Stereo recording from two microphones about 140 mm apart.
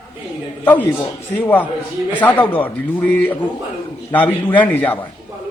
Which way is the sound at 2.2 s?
15° left (ahead or behind).